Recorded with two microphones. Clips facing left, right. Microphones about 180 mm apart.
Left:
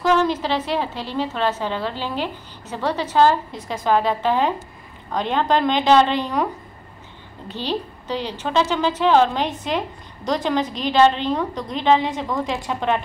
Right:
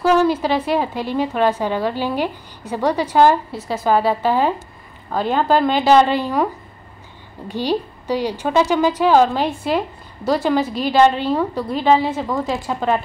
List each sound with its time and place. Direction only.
0.0 s a woman's voice: 10° right (ahead or behind)
7.4 s a woman's voice: 10° right (ahead or behind)